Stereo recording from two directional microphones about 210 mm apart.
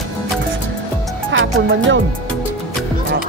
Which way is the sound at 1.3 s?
65° right (ahead or behind).